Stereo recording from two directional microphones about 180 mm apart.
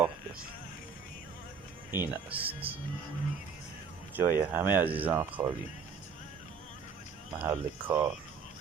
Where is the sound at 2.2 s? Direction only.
10° right (ahead or behind).